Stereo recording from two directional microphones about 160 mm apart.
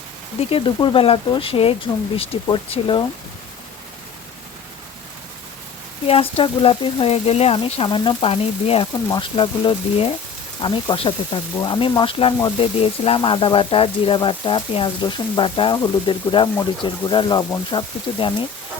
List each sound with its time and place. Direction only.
0.3 s speech: 35° left (ahead or behind)
6.1 s speech: 35° left (ahead or behind)